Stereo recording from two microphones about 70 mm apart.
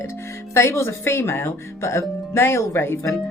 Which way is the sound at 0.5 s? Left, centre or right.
Left.